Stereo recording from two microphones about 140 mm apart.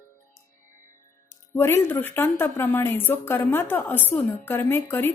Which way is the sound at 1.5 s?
15° left (ahead or behind).